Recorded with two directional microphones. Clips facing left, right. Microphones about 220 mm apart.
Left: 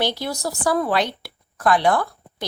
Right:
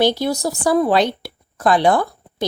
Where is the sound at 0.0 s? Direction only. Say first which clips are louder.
Right 7 dB; 25° right (ahead or behind).